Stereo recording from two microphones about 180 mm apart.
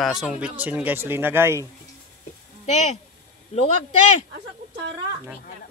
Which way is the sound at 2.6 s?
40° left (ahead or behind).